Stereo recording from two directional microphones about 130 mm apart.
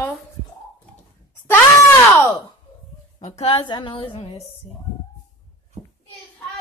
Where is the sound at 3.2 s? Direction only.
50° left (ahead or behind).